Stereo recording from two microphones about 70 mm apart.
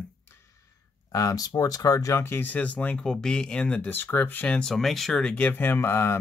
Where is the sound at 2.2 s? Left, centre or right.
Left.